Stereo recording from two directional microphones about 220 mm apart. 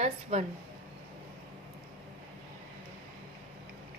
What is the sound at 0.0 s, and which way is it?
Speech, 30° right (ahead or behind).